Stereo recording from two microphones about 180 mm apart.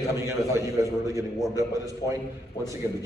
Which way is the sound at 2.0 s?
20° left (ahead or behind).